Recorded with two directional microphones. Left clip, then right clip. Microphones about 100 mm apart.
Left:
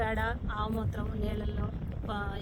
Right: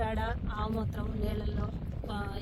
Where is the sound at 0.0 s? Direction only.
25° left (ahead or behind).